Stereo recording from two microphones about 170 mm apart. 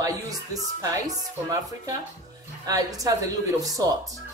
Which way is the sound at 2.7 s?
20° right (ahead or behind).